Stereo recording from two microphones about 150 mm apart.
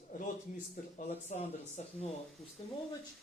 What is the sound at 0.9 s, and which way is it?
Speech, 50° left (ahead or behind).